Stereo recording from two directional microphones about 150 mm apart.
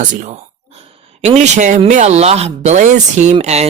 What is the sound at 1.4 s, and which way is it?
Speech, 55° right (ahead or behind).